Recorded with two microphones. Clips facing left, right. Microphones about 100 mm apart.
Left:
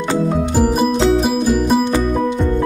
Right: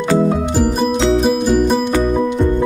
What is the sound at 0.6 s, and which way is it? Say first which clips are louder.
Music: left 2 dB; 5° left (ahead or behind).